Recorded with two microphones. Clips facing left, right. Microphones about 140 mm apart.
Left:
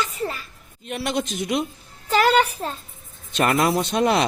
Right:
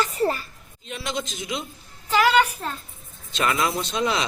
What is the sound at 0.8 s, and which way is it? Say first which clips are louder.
Speech: left 5 dB; 60° left (ahead or behind).